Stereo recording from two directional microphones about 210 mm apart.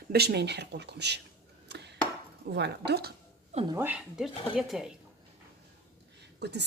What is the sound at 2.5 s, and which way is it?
Speech, 50° right (ahead or behind).